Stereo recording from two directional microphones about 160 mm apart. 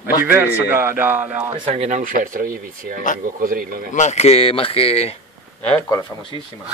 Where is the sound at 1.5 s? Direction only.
35° right (ahead or behind); by 3.9 s 65° right (ahead or behind).